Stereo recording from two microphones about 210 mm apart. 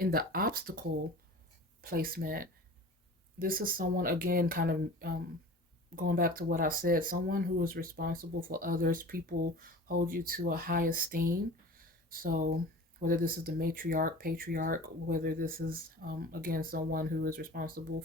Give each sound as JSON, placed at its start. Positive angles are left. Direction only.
{"t": 0.0, "sound": "speech", "side_deg": -45}